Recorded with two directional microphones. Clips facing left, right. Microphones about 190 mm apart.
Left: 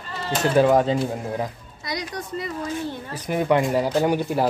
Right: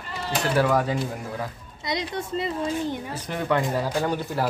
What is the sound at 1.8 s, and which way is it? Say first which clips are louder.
A child's voice: right 2 dB; 25° right (ahead or behind).